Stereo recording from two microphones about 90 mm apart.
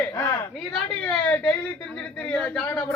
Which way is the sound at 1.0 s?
15° left (ahead or behind).